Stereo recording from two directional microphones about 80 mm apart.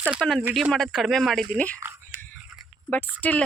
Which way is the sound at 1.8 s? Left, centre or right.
Right.